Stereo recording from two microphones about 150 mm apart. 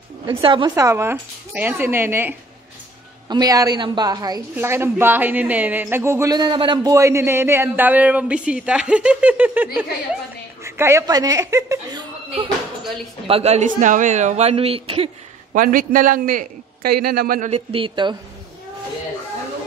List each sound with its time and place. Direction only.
0.3 s a woman's voice: 35° right (ahead or behind); by 2.3 s 15° right (ahead or behind)
3.3 s a woman's voice: 25° right (ahead or behind)
4.6 s a man's voice: 15° right (ahead or behind)
6.3 s a man's voice: 30° right (ahead or behind)
13.3 s a man's voice: 45° right (ahead or behind)
15.5 s a man's voice: 70° right (ahead or behind)
17.5 s speech: 40° right (ahead or behind)